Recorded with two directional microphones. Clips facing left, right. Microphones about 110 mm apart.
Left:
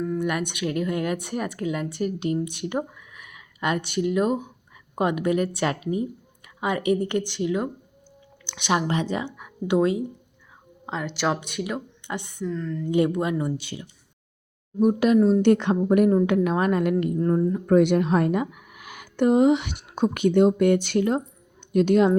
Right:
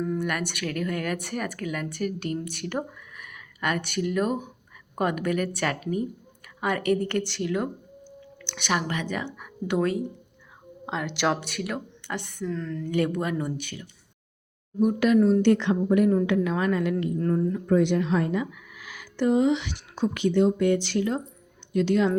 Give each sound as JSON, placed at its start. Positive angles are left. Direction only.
{"t": 0.2, "sound": "speech", "side_deg": 15}
{"t": 8.6, "sound": "speech", "side_deg": 25}
{"t": 9.2, "sound": "speech", "side_deg": 15}
{"t": 10.8, "sound": "speech", "side_deg": 0}
{"t": 12.0, "sound": "speech", "side_deg": 20}
{"t": 12.4, "sound": "speech", "side_deg": 5}
{"t": 12.9, "sound": "speech", "side_deg": 20}
{"t": 13.6, "sound": "speech", "side_deg": 25}
{"t": 14.8, "sound": "speech", "side_deg": 40}
{"t": 15.4, "sound": "a woman's voice", "side_deg": 45}
{"t": 17.2, "sound": "speech", "side_deg": 25}
{"t": 17.7, "sound": "speech", "side_deg": 55}